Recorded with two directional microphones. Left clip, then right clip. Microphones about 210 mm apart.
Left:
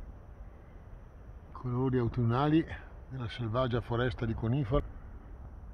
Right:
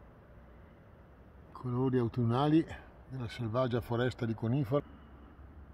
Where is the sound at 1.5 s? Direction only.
5° right (ahead or behind).